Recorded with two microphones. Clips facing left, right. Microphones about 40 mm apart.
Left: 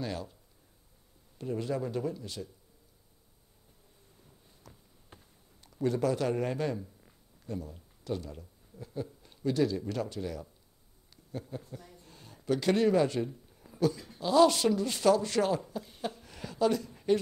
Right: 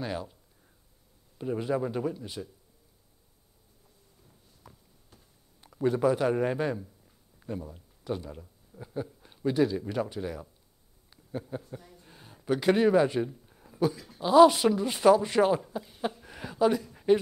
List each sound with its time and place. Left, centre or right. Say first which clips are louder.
0.0 s speech: right 2 dB; centre
1.4 s speech: right 4 dB; right
5.6 s a man's voice: right 4 dB; centre
11.5 s speech: right 4 dB; centre
12.0 s a sound: right 1 dB; centre
13.9 s speech: right 1 dB; centre
14.2 s speech: right 5 dB; centre
16.0 s a sound: right 6 dB; centre